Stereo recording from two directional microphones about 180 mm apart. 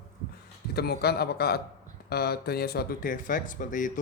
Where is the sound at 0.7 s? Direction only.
60° left (ahead or behind).